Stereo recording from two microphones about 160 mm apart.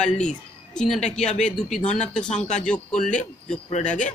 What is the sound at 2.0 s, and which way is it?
Speech, 5° left (ahead or behind).